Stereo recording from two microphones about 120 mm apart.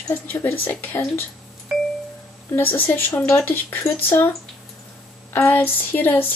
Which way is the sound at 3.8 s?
20° left (ahead or behind).